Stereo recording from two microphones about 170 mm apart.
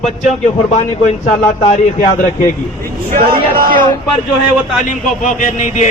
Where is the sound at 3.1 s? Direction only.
55° right (ahead or behind).